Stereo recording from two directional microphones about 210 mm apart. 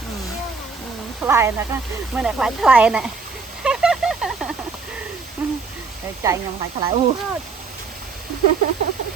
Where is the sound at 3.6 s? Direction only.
5° right (ahead or behind).